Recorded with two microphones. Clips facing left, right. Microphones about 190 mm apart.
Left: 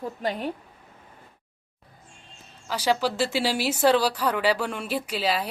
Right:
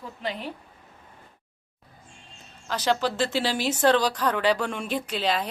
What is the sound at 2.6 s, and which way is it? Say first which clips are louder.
Speech: left 1 dB; 10° left (ahead or behind).